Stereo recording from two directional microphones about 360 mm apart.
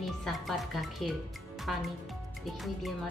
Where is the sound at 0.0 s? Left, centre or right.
Centre.